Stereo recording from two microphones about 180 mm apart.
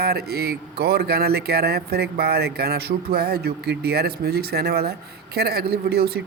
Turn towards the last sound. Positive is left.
turn(degrees=-60)  # may be behind; listen again after turning